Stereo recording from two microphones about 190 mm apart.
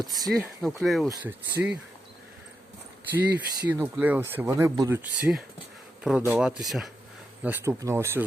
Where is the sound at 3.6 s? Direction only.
10° right (ahead or behind).